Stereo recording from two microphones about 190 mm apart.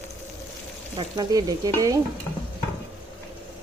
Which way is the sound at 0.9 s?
20° right (ahead or behind).